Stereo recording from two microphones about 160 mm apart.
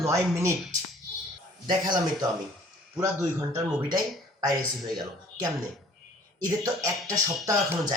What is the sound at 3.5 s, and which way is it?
Speech, 20° right (ahead or behind).